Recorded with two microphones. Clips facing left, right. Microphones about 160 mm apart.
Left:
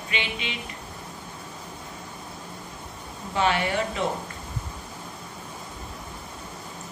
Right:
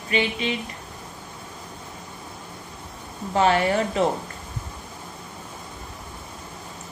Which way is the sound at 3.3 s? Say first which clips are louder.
Right 4 dB; 40° right (ahead or behind).